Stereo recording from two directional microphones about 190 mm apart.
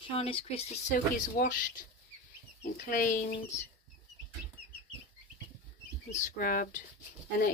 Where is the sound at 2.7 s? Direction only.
45° left (ahead or behind).